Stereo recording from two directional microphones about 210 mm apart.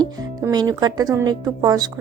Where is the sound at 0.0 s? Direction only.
20° right (ahead or behind).